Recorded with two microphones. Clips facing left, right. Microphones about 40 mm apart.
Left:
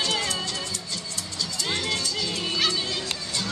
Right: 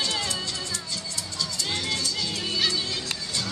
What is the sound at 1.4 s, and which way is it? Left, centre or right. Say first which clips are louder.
Music: left 2 dB; centre.